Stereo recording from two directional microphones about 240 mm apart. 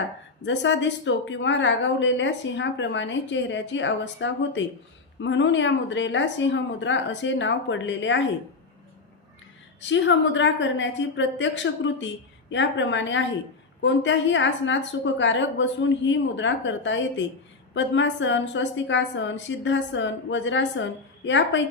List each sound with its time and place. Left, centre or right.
0.4 s a woman's voice: left
9.9 s a woman's voice: left